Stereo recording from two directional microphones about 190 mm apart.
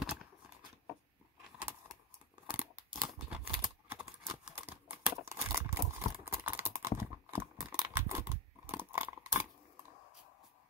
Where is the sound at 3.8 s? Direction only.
10° right (ahead or behind).